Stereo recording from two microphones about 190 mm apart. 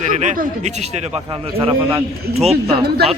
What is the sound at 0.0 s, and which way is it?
A man's voice, 40° right (ahead or behind).